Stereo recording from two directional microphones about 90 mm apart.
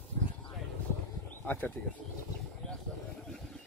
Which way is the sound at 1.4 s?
20° left (ahead or behind).